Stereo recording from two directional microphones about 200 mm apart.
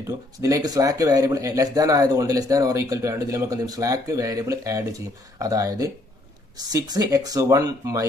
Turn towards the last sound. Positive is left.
turn(degrees=-20)  # may be behind; listen again after turning